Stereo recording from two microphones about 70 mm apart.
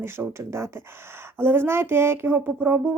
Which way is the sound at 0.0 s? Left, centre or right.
Right.